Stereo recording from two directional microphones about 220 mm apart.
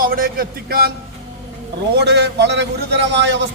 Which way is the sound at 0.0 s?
40° right (ahead or behind).